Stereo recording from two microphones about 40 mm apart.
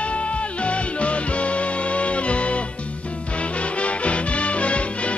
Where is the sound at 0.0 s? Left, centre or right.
Left.